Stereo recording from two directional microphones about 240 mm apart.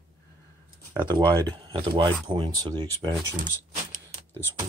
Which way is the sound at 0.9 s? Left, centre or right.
Centre.